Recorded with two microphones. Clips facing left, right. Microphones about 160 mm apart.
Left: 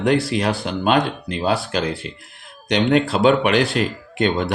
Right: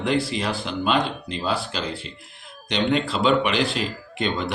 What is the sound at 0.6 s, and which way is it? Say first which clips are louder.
Speech: left 4 dB; 50° left (ahead or behind).